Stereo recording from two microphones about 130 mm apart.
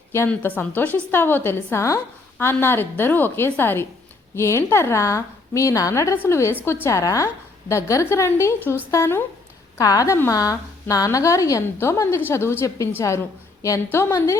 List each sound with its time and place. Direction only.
0.3 s a woman's voice: 10° left (ahead or behind)